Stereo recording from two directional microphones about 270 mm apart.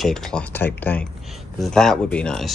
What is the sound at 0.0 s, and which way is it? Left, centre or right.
Speech, centre.